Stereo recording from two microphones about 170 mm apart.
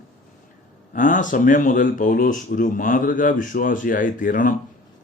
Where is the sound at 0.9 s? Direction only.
50° left (ahead or behind).